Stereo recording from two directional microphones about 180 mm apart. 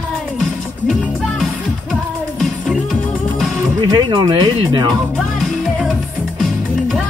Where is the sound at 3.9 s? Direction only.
25° right (ahead or behind).